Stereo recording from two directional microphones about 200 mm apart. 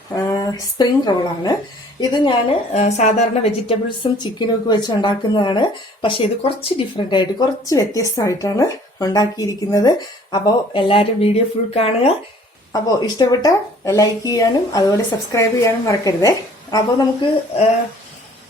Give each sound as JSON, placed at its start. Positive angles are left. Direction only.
{"t": 0.2, "sound": "a woman's voice", "side_deg": 20}
{"t": 2.8, "sound": "a woman's voice", "side_deg": 35}
{"t": 12.7, "sound": "a woman's voice", "side_deg": 20}